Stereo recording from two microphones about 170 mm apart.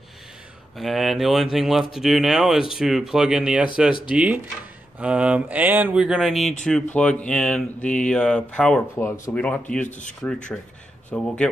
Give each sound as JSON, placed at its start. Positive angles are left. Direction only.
{"t": 0.7, "sound": "speech", "side_deg": 0}
{"t": 9.8, "sound": "speech", "side_deg": 45}
{"t": 10.2, "sound": "speech", "side_deg": 5}